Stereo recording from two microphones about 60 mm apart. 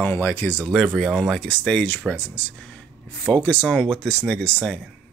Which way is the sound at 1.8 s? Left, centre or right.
Left.